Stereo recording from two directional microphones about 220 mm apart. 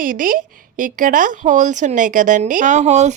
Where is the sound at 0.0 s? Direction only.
40° right (ahead or behind).